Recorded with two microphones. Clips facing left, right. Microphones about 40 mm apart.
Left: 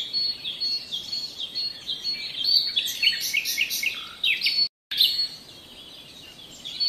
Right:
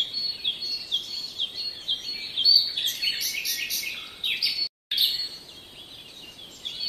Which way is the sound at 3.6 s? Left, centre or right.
Left.